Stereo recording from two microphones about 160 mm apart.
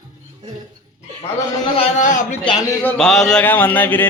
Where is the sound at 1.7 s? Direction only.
50° left (ahead or behind).